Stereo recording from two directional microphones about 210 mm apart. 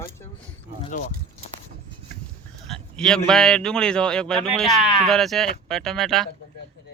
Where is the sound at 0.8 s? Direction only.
35° left (ahead or behind).